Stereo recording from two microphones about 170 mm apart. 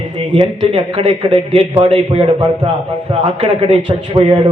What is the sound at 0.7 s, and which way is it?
A man's voice, 30° right (ahead or behind).